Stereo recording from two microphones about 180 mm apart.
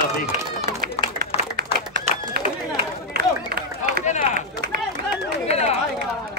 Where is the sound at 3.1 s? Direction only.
60° right (ahead or behind).